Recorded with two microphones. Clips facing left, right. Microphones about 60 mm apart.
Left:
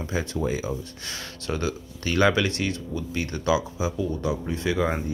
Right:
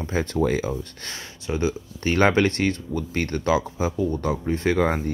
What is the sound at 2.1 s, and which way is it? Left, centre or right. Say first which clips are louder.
Speech: right 2 dB; right.